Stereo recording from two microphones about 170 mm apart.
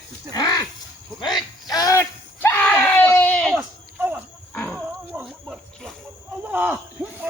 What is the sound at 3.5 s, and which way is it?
Cricket, 10° right (ahead or behind).